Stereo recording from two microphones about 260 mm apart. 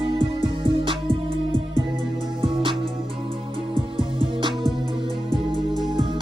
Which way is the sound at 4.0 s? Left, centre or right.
Centre.